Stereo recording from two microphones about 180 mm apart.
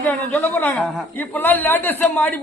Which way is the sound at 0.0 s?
10° left (ahead or behind).